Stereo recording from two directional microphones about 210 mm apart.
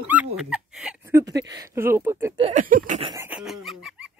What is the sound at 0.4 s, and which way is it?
Speech, 5° right (ahead or behind).